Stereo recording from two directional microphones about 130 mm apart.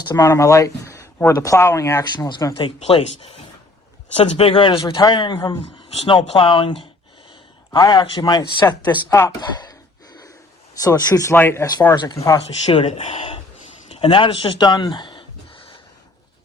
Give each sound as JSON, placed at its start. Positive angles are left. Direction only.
{"t": 0.1, "sound": "speech", "side_deg": 25}
{"t": 2.1, "sound": "speech", "side_deg": 30}
{"t": 2.8, "sound": "speech", "side_deg": 50}
{"t": 5.9, "sound": "speech", "side_deg": 45}
{"t": 12.6, "sound": "speech", "side_deg": 55}
{"t": 14.0, "sound": "a sound", "side_deg": 40}